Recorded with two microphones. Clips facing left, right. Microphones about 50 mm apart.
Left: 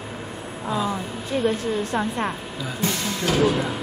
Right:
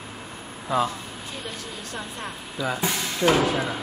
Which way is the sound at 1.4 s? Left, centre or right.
Left.